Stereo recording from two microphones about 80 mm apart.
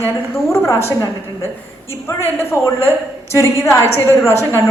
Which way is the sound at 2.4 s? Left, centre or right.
Left.